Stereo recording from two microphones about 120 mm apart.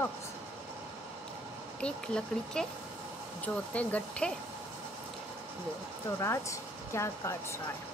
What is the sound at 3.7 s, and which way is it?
Speech, 10° left (ahead or behind).